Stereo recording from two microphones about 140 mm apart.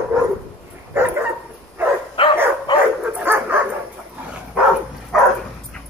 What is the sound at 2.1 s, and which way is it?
Dog, 35° left (ahead or behind).